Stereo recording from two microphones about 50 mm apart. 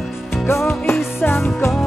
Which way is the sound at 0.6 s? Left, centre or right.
Left.